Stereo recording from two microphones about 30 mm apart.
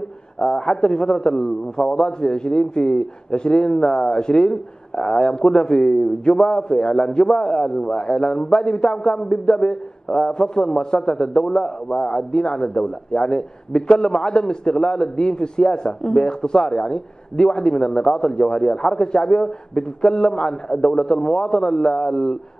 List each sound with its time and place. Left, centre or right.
0.5 s a man's voice: left